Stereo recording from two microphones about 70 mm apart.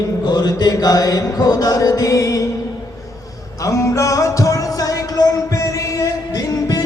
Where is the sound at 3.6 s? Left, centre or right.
Left.